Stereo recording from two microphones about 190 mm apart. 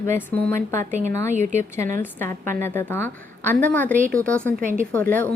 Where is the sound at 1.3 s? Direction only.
40° right (ahead or behind).